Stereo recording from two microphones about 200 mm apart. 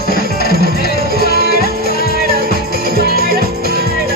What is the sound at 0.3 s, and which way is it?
Music, 50° left (ahead or behind).